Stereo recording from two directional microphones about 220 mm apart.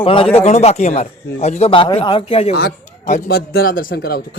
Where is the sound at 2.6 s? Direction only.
45° left (ahead or behind).